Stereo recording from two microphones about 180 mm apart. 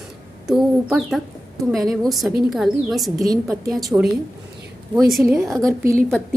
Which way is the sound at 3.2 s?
20° right (ahead or behind).